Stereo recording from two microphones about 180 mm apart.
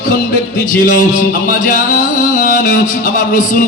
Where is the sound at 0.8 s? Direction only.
45° left (ahead or behind).